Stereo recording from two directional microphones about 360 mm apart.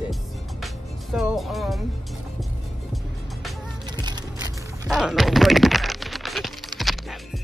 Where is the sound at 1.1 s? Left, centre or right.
Centre.